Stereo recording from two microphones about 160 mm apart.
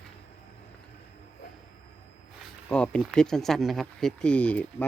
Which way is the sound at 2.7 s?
5° left (ahead or behind).